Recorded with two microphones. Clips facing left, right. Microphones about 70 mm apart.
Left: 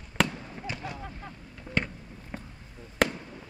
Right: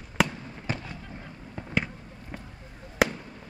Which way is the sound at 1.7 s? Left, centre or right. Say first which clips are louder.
Right 1 dB; centre.